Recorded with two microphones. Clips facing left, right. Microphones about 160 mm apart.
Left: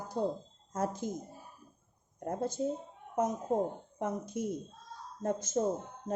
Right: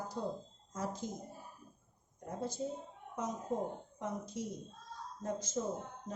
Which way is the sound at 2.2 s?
55° left (ahead or behind).